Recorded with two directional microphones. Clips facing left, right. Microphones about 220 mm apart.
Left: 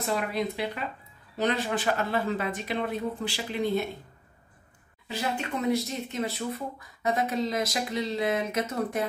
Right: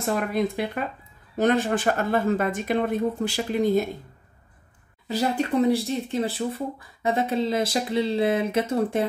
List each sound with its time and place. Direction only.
0.0 s speech: 50° right (ahead or behind)
5.0 s speech: 40° right (ahead or behind)